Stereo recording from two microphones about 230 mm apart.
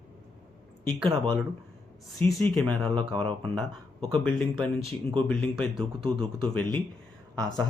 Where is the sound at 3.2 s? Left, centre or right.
Centre.